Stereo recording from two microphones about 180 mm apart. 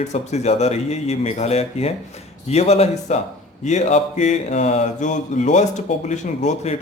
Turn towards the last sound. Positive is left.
turn(degrees=40)  # may be behind; listen again after turning